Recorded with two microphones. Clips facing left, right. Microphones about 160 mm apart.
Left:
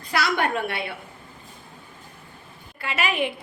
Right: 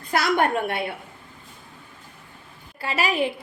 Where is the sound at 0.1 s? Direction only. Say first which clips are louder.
Right 3 dB; 50° right (ahead or behind).